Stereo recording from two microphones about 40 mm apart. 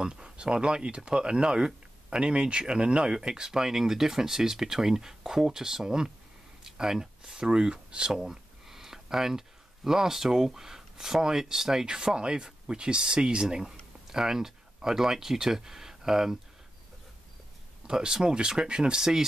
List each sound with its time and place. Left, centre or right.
0.0 s speech: right
8.1 s a sound: centre
9.8 s speech: centre
17.8 s speech: centre